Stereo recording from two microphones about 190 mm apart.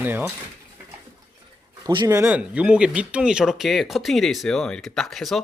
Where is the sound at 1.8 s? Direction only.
20° right (ahead or behind).